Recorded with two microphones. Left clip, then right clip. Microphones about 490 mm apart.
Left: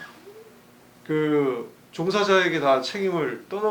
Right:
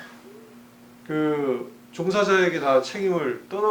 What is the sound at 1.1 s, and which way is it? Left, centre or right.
Speech, left.